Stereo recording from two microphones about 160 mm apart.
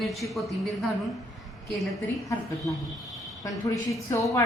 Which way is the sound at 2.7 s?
20° left (ahead or behind).